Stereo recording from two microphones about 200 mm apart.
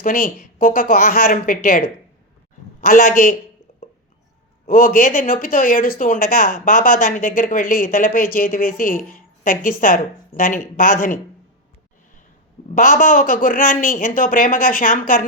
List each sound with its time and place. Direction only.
0.0 s speech: 45° left (ahead or behind)
2.8 s speech: 45° left (ahead or behind)
3.7 s a sound: 35° left (ahead or behind)
4.6 s speech: 45° left (ahead or behind)
12.7 s speech: 40° left (ahead or behind)